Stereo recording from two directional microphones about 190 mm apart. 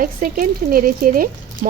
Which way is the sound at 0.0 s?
45° right (ahead or behind).